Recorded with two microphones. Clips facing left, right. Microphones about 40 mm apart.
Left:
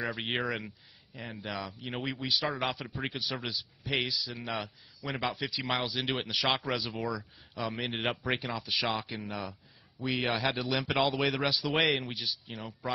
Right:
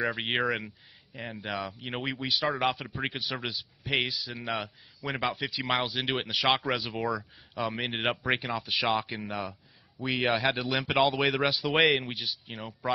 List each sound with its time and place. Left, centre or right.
0.0 s a man's voice: centre; by 4.4 s right
4.4 s speech: centre